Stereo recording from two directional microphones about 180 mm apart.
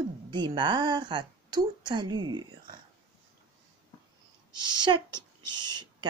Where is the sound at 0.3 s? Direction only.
25° right (ahead or behind).